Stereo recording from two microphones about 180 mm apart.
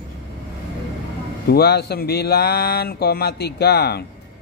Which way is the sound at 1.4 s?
65° left (ahead or behind).